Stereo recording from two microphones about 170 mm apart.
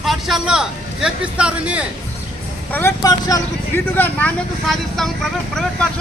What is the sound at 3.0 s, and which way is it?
Speech, 20° left (ahead or behind).